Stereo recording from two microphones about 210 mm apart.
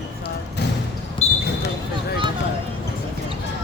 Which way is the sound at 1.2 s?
30° left (ahead or behind).